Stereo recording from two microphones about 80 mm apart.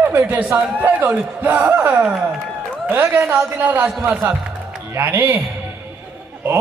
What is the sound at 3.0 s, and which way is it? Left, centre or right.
Speech, right.